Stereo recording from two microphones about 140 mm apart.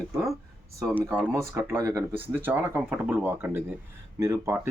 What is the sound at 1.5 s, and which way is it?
Speech, 20° right (ahead or behind).